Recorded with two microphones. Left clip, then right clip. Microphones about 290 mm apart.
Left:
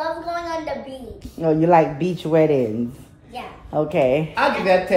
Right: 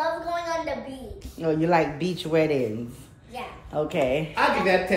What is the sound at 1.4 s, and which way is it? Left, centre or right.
Mantra, left.